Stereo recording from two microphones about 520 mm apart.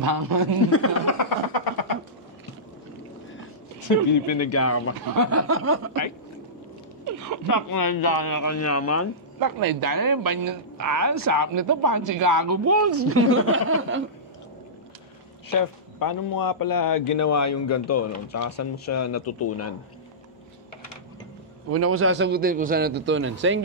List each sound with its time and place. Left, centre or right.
0.0 s speech: right
0.7 s speech: left
4.3 s speech: left
5.0 s a man's voice: right
7.4 s a man's voice: left
9.4 s speech: right
15.5 s a man's voice: left
21.6 s a man's voice: right